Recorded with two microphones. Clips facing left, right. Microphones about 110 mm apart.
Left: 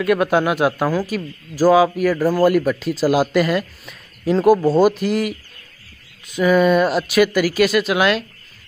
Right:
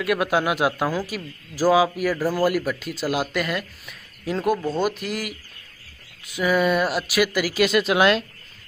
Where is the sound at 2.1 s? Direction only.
15° left (ahead or behind).